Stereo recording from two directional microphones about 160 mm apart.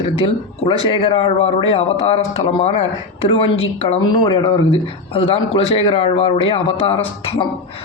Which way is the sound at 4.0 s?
30° left (ahead or behind).